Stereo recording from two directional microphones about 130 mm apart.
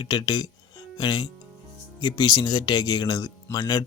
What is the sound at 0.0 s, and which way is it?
A man's voice, 30° left (ahead or behind).